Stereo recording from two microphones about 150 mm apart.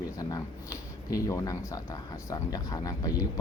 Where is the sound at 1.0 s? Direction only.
20° left (ahead or behind).